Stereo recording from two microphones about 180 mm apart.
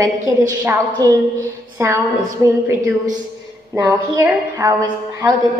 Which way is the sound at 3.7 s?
15° right (ahead or behind).